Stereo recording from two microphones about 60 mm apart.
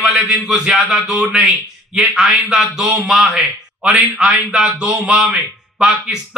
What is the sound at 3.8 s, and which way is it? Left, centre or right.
Speech, centre.